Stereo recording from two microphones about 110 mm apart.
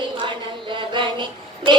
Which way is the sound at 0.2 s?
50° right (ahead or behind).